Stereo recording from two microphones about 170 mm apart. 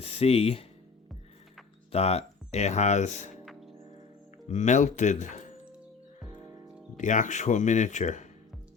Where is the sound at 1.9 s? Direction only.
35° left (ahead or behind).